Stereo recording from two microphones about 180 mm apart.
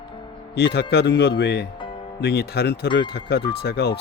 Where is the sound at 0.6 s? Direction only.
65° left (ahead or behind).